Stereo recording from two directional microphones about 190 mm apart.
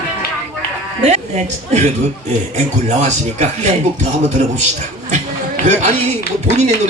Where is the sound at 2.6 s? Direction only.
40° right (ahead or behind).